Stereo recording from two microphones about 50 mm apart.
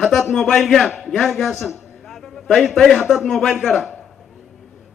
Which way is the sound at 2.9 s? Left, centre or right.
Centre.